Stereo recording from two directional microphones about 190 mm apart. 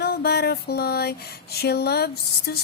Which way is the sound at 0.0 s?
55° left (ahead or behind).